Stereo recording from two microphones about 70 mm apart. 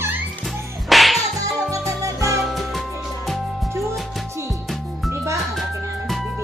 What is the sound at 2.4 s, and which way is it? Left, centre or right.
Music, centre.